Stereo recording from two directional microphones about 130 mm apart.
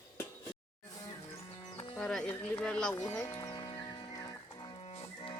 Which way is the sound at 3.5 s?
35° left (ahead or behind).